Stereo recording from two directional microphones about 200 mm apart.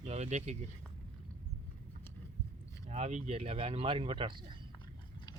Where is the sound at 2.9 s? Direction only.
35° right (ahead or behind).